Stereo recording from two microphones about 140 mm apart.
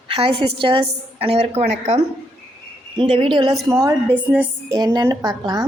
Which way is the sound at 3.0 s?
35° right (ahead or behind).